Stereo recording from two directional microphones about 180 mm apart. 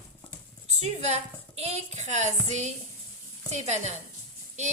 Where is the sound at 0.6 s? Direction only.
40° right (ahead or behind).